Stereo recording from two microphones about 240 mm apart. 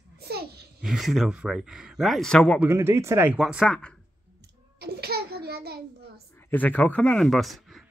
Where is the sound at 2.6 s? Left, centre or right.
Centre.